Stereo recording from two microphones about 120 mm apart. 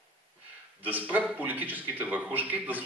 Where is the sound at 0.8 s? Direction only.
15° right (ahead or behind).